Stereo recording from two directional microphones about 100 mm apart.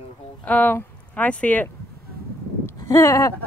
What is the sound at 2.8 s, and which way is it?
Speech, 30° left (ahead or behind).